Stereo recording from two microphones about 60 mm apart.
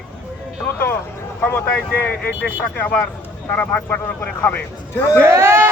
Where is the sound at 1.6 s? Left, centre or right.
Left.